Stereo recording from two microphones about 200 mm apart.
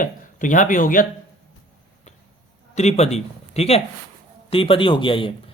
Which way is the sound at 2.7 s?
35° left (ahead or behind).